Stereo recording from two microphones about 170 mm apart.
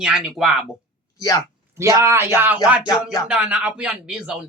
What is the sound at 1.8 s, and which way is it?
Speech, 15° right (ahead or behind).